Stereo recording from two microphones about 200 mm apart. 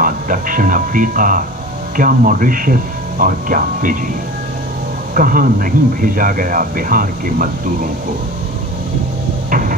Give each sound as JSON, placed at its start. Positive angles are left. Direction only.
{"t": 0.0, "sound": "speech", "side_deg": -40}
{"t": 5.1, "sound": "speech", "side_deg": -45}
{"t": 9.5, "sound": "hum", "side_deg": -45}